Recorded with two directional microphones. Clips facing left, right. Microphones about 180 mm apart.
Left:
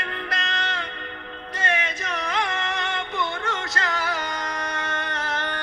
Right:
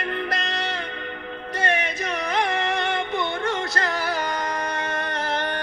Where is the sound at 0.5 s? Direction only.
10° right (ahead or behind).